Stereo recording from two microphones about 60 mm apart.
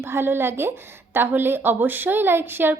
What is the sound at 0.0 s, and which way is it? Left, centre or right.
A woman's voice, right.